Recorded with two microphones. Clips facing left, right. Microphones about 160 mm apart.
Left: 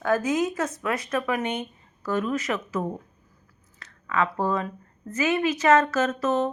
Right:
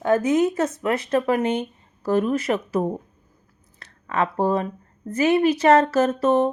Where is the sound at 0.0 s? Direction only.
25° right (ahead or behind).